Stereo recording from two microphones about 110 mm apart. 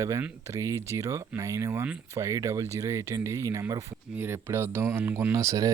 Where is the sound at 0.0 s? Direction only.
25° right (ahead or behind).